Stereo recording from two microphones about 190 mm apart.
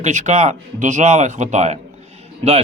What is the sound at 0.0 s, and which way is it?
A man's voice, 40° right (ahead or behind).